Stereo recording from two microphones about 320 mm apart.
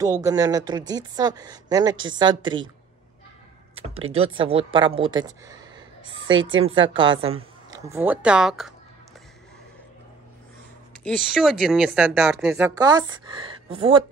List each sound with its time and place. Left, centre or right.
0.0 s a woman's voice: centre
4.0 s a woman's voice: centre
6.0 s speech: right
6.9 s a woman's voice: centre
11.1 s speech: centre